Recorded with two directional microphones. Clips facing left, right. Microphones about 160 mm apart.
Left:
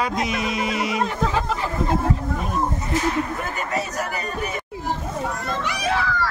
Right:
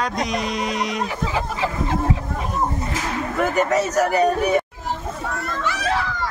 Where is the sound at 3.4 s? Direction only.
80° right.